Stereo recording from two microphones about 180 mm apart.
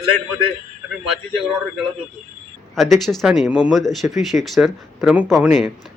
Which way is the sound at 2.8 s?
Centre (ahead or behind).